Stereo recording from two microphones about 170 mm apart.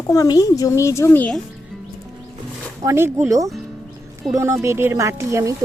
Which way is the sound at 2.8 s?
15° right (ahead or behind).